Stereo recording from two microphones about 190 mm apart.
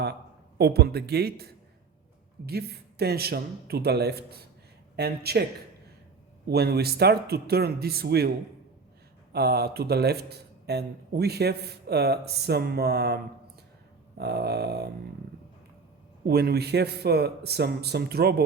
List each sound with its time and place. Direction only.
0.6 s speech: 55° right (ahead or behind)
2.5 s speech: 55° right (ahead or behind)
6.5 s speech: 55° right (ahead or behind)
9.3 s speech: 55° right (ahead or behind)
14.2 s speech: 60° right (ahead or behind)
16.2 s speech: 55° right (ahead or behind)